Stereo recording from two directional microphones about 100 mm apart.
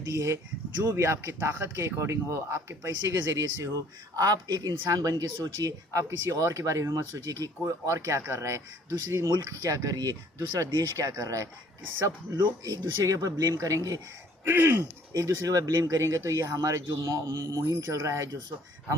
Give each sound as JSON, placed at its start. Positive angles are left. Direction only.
{"t": 0.1, "sound": "speech", "side_deg": -30}
{"t": 12.6, "sound": "speech", "side_deg": -35}
{"t": 14.4, "sound": "speech", "side_deg": -20}
{"t": 15.1, "sound": "speech", "side_deg": -35}